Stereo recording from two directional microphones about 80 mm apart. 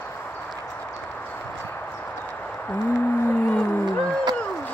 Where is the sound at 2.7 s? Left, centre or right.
Left.